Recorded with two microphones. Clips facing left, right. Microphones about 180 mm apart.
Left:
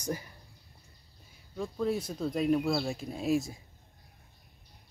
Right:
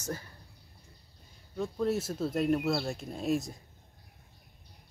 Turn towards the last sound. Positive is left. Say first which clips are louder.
# left 1 dB
turn(degrees=0)  # may be behind; listen again after turning